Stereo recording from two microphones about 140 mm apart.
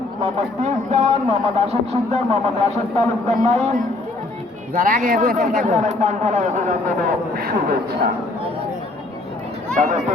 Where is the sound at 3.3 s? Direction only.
55° right (ahead or behind).